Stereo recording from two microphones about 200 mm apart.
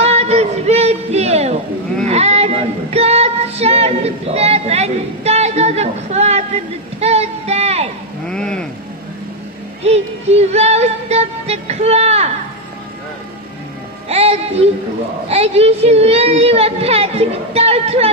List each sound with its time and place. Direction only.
0.0 s music: 30° right (ahead or behind)
2.0 s child singing: 30° right (ahead or behind)
8.3 s a sound: 5° left (ahead or behind)
9.8 s music: 30° right (ahead or behind)
14.0 s music: 30° right (ahead or behind)
15.2 s a woman's voice: 30° right (ahead or behind)